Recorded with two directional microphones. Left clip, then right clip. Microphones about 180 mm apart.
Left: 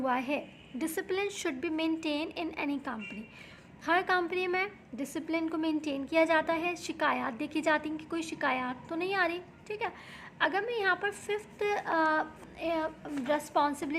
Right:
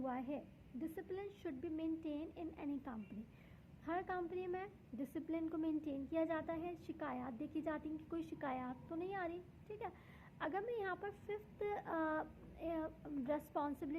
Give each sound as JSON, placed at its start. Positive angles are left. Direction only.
{"t": 0.0, "sound": "a woman's voice", "side_deg": 15}